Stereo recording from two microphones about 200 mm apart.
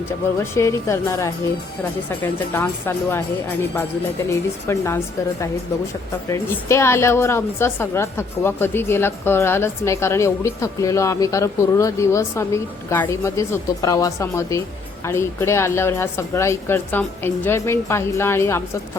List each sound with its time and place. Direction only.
0.3 s a woman's voice: 15° left (ahead or behind)
6.3 s a woman's voice: 15° left (ahead or behind)